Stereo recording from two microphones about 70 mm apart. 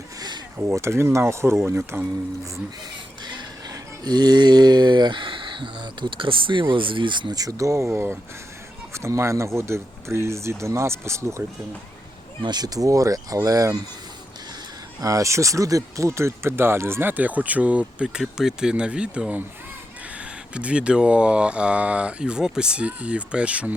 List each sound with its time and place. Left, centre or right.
0.2 s a sound: right
0.7 s speech: right
3.2 s a sound: right
6.0 s speech: right
7.1 s speech: right
12.5 s speech: right
15.0 s speech: right; by 23.7 s centre